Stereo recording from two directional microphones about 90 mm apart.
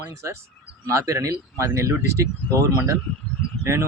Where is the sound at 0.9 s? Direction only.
35° right (ahead or behind).